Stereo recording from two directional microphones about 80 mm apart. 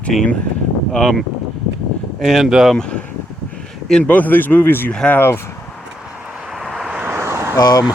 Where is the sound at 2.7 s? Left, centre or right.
Centre.